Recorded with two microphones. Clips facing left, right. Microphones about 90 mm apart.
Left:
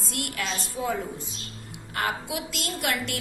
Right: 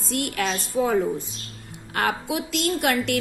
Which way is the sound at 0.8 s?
60° right (ahead or behind).